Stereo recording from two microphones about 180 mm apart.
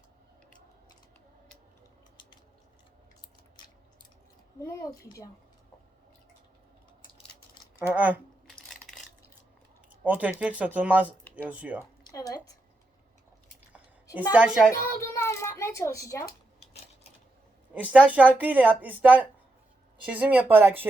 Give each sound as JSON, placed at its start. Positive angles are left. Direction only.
{"t": 4.6, "sound": "a child's voice", "side_deg": 15}
{"t": 7.9, "sound": "a sound", "side_deg": -10}
{"t": 9.9, "sound": "speech", "side_deg": -10}
{"t": 11.0, "sound": "speech", "side_deg": 10}
{"t": 11.4, "sound": "speech", "side_deg": -10}
{"t": 12.1, "sound": "a woman's voice", "side_deg": 20}
{"t": 13.7, "sound": "a sound", "side_deg": -10}
{"t": 14.3, "sound": "a woman's voice", "side_deg": -5}
{"t": 14.7, "sound": "a child's voice", "side_deg": 15}
{"t": 17.8, "sound": "speech", "side_deg": -10}